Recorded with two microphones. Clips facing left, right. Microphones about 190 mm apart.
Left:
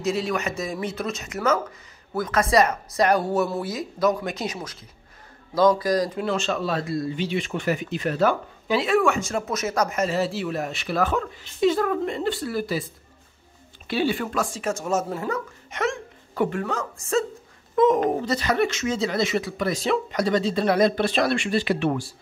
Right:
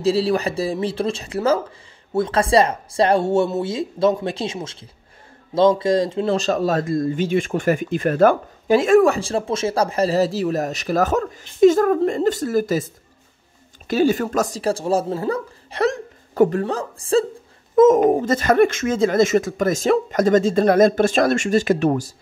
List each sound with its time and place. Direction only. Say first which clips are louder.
0.0 s a woman's voice: right 6 dB; 30° right (ahead or behind)
6.3 s speech: right 8 dB; 40° right (ahead or behind)
17.7 s speech: right 7 dB; 45° right (ahead or behind)